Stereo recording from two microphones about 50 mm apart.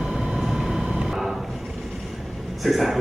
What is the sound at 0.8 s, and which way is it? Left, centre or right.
Vehicle, right.